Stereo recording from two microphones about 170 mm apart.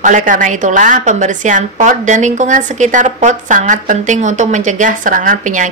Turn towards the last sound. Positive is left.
turn(degrees=-50)  # may be behind; listen again after turning